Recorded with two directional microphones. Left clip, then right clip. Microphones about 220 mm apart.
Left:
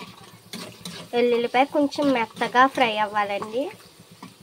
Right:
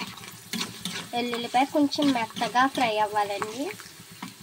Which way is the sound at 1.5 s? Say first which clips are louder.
Left 3 dB; 10° left (ahead or behind).